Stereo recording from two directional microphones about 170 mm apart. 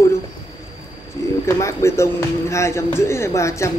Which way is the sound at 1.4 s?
15° left (ahead or behind).